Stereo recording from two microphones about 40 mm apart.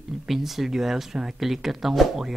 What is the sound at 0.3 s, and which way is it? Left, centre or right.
Speech, centre.